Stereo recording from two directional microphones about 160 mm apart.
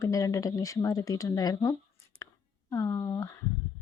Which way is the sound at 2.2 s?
20° left (ahead or behind).